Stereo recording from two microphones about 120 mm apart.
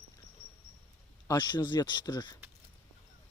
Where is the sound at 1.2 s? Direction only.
35° left (ahead or behind).